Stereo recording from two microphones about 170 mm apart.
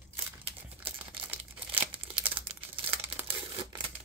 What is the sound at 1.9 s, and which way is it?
Crumpling, 30° right (ahead or behind).